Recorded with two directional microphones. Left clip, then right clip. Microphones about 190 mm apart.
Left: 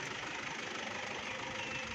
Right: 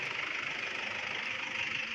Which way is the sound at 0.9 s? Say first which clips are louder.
Right 5 dB; 20° left (ahead or behind).